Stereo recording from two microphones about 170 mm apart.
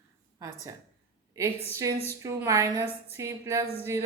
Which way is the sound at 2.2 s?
20° right (ahead or behind).